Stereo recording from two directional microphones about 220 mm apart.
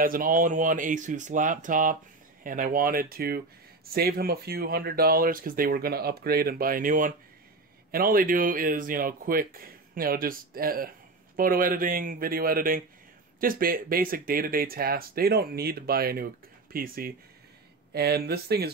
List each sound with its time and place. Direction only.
0.0 s speech: 40° right (ahead or behind)